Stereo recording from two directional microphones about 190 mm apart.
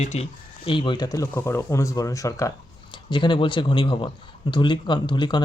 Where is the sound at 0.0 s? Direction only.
35° left (ahead or behind).